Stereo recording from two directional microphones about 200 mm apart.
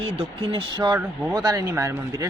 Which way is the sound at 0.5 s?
20° right (ahead or behind).